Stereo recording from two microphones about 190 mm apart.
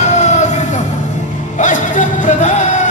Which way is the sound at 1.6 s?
40° left (ahead or behind).